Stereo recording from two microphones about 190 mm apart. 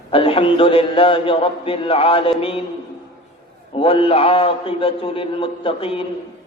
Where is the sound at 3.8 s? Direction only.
30° left (ahead or behind).